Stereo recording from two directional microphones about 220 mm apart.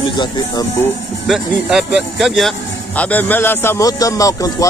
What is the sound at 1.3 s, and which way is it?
A man's voice, 5° right (ahead or behind).